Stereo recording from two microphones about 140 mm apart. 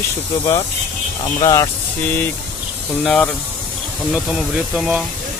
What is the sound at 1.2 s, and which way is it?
Speech, 25° left (ahead or behind).